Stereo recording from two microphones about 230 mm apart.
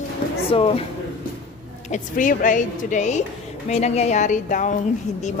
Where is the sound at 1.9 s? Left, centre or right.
Left.